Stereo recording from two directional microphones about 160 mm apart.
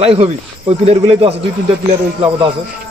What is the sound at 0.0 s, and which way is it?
Speech, 35° right (ahead or behind).